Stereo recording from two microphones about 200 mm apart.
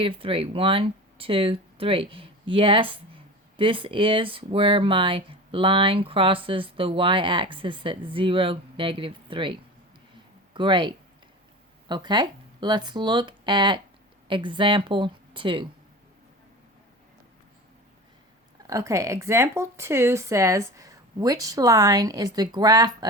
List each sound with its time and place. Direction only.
0.0 s speech: 25° right (ahead or behind)
18.7 s speech: 15° right (ahead or behind)